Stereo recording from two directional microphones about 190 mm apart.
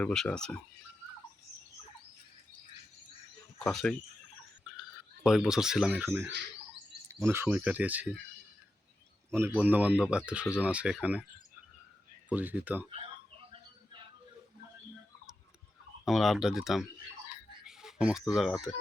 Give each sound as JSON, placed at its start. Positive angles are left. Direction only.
{"t": 0.0, "sound": "speech", "side_deg": 5}
{"t": 3.7, "sound": "speech", "side_deg": 0}
{"t": 9.5, "sound": "speech", "side_deg": -10}
{"t": 12.3, "sound": "speech", "side_deg": -10}
{"t": 12.9, "sound": "music", "side_deg": -30}
{"t": 16.0, "sound": "speech", "side_deg": 0}